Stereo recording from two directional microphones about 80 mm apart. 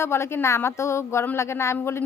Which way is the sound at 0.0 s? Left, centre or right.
Left.